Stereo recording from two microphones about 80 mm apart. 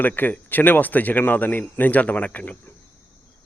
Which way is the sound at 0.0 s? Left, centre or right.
Left.